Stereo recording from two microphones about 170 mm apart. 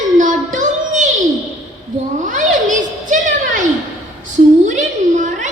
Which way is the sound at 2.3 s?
50° right (ahead or behind).